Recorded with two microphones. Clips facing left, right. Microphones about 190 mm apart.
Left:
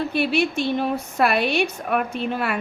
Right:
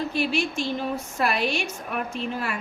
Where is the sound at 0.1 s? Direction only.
60° left (ahead or behind).